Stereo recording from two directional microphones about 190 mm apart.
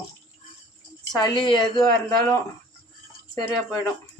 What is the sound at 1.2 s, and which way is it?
Speech, 20° left (ahead or behind).